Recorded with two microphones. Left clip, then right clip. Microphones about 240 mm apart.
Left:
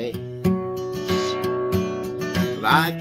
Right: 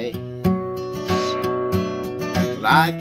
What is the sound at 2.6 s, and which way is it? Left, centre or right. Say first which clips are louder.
Music: right 3 dB; centre.